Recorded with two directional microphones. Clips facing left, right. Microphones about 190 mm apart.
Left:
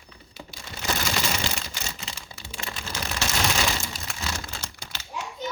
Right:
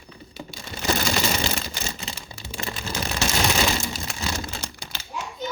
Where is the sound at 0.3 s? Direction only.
35° right (ahead or behind).